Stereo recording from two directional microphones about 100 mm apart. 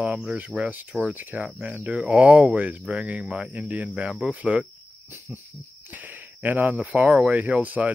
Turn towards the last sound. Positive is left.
turn(degrees=-15)  # may be behind; listen again after turning